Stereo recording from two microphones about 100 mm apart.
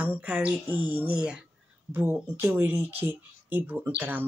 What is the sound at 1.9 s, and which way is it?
Speech, 20° right (ahead or behind).